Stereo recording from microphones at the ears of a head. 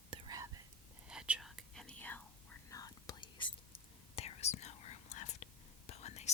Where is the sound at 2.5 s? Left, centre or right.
Left.